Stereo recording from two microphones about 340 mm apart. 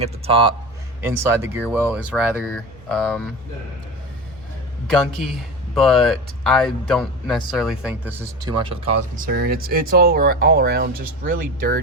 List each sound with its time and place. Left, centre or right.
0.0 s speech: centre
4.9 s speech: centre
9.1 s speech: right